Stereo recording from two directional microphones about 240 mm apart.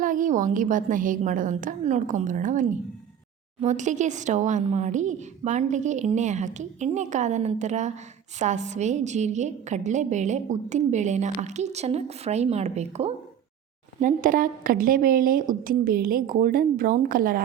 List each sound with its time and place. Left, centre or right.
0.0 s a woman's voice: right